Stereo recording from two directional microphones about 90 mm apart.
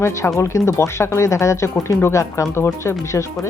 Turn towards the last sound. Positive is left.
turn(degrees=35)  # may be behind; listen again after turning